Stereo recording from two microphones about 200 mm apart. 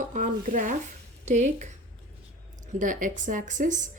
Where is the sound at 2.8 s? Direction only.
40° right (ahead or behind).